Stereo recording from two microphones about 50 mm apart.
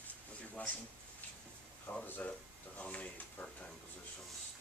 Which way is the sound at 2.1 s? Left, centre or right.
Left.